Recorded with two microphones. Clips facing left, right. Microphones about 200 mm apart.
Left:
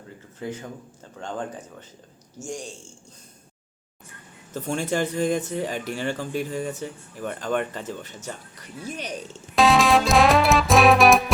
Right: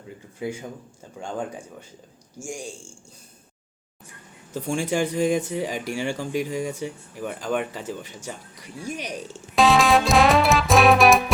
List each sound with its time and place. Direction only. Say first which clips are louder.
0.3 s speech: right 2 dB; 10° right (ahead or behind)
4.5 s speech: right 1 dB; 10° right (ahead or behind)
9.6 s music: even; centre (ahead or behind)